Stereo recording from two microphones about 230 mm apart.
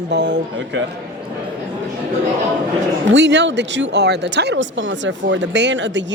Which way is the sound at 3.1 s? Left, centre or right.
Right.